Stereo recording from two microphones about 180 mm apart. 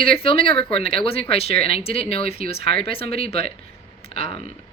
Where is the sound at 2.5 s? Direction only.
55° right (ahead or behind).